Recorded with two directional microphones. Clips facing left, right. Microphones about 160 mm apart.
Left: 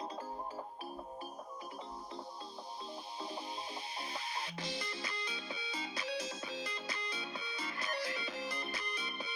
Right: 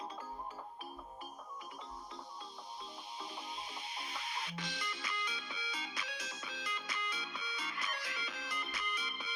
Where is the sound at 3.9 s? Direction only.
30° left (ahead or behind).